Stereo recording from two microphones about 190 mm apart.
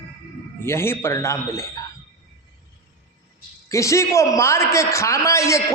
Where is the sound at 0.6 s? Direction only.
15° left (ahead or behind).